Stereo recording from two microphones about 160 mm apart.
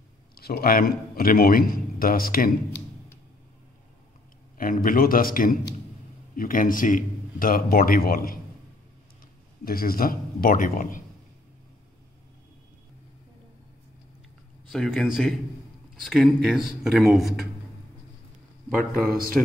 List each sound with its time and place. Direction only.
0.3 s a man's voice: 70° left (ahead or behind)
4.6 s a man's voice: 60° left (ahead or behind)
9.7 s a man's voice: 65° left (ahead or behind)
14.7 s speech: 5° left (ahead or behind)